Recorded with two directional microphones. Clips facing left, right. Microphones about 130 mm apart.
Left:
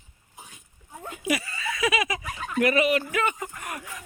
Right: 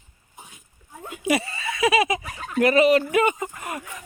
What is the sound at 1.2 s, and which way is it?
Speech, 25° right (ahead or behind).